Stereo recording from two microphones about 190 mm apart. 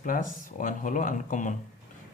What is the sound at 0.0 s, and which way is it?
Speech, 45° left (ahead or behind).